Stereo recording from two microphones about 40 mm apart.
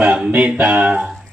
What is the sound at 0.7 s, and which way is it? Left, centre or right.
Speech, right.